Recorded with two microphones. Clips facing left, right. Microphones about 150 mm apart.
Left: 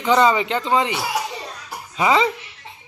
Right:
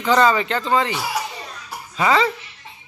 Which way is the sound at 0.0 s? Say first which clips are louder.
Even; 15° left (ahead or behind).